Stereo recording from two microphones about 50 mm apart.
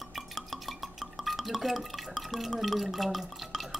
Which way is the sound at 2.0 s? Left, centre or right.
Centre.